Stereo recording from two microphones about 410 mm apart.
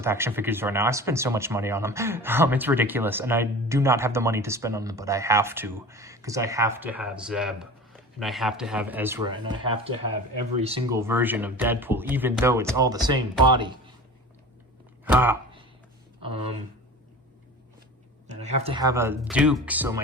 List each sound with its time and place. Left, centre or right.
0.0 s speech: centre
15.0 s a sound: centre
18.3 s speech: centre